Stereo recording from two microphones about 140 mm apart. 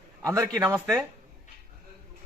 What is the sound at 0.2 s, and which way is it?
Speech, 20° right (ahead or behind).